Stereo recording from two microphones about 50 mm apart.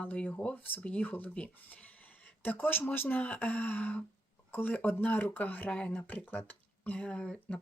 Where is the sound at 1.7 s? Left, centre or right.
Left.